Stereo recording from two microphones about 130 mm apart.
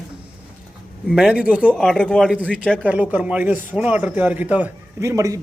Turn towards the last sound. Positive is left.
turn(degrees=-25)  # may be behind; listen again after turning